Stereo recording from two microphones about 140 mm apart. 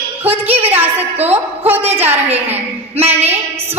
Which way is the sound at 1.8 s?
50° right (ahead or behind).